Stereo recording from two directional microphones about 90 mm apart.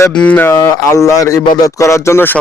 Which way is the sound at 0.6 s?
35° left (ahead or behind).